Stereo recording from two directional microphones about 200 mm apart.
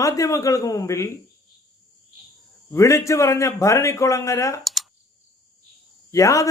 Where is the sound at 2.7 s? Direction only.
15° left (ahead or behind).